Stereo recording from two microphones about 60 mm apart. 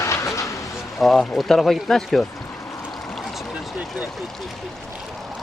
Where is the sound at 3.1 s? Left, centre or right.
Centre.